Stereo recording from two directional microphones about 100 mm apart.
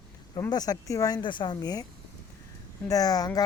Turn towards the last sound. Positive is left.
turn(degrees=40)  # may be behind; listen again after turning